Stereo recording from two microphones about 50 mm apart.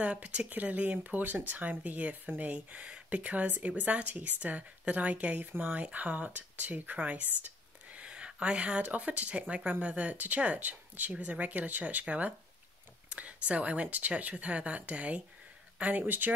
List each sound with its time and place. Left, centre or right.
0.0 s speech: right